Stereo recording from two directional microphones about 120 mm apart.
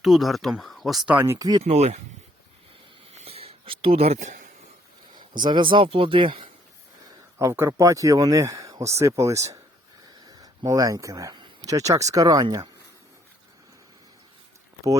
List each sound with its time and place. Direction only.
0.0 s speech: centre (ahead or behind)
1.1 s speech: 20° right (ahead or behind)
1.6 s speech: 60° right (ahead or behind)
3.1 s a sound: 55° right (ahead or behind); by 4.4 s 90° right
5.1 s speech: 40° right (ahead or behind)
7.3 s speech: 20° right (ahead or behind)